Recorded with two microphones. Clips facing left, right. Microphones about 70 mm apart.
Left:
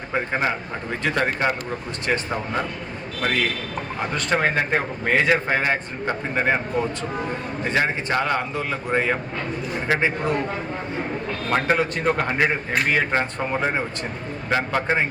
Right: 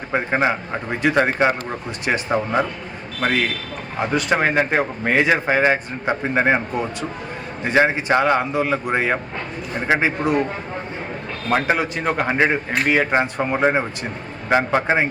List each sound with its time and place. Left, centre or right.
0.1 s speech: right
4.1 s a man's voice: centre
7.6 s a man's voice: centre
11.5 s a man's voice: centre